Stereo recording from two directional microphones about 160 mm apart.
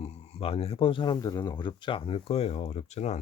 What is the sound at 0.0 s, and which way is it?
Speech, 40° left (ahead or behind).